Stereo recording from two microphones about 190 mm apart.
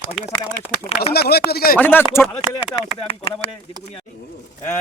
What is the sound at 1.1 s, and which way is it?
Speech, 55° left (ahead or behind).